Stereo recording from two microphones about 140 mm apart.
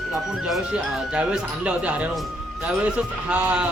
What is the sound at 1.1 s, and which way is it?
Speech, 5° right (ahead or behind).